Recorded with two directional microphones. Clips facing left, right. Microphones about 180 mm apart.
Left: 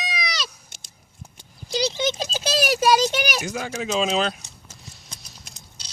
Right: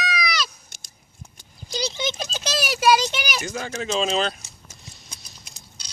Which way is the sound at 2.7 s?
45° left (ahead or behind).